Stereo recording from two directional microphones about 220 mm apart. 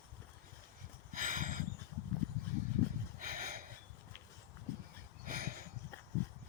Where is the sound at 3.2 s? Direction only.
40° right (ahead or behind).